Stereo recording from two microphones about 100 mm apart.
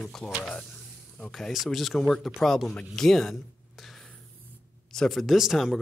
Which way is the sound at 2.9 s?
5° left (ahead or behind).